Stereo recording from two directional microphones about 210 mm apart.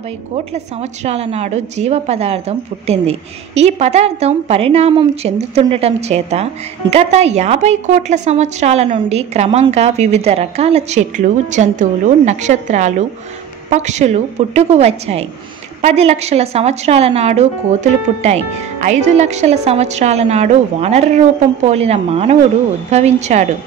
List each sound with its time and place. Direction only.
1.0 s a woman's voice: 30° right (ahead or behind)